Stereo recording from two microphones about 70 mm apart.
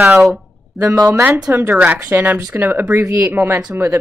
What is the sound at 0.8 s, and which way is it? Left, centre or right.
Speech, right.